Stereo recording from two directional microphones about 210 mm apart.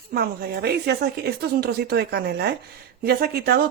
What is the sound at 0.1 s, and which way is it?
Speech, 50° right (ahead or behind).